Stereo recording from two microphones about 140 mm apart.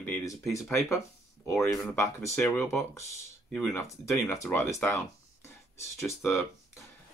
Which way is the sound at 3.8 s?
20° left (ahead or behind).